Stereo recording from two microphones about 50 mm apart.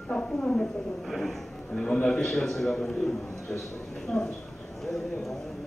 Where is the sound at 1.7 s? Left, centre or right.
Centre.